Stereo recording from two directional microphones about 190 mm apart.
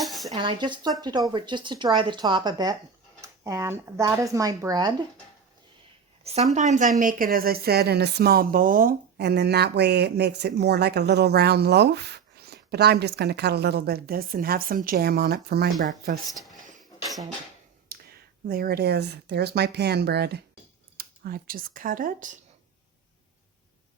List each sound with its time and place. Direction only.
0.0 s dishes: centre (ahead or behind)
0.3 s speech: 25° right (ahead or behind)
6.2 s speech: 35° right (ahead or behind)
17.9 s a sound: 50° right (ahead or behind)
18.4 s speech: 50° right (ahead or behind)